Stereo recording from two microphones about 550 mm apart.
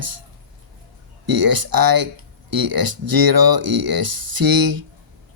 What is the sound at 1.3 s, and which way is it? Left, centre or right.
Speech, right.